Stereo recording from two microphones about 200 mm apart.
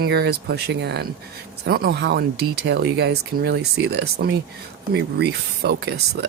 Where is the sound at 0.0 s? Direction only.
55° right (ahead or behind).